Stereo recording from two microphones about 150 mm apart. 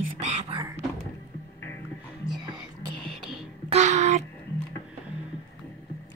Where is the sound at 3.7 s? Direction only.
50° right (ahead or behind).